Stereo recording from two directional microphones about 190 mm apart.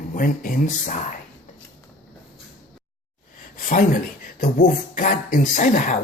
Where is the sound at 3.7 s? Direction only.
45° left (ahead or behind).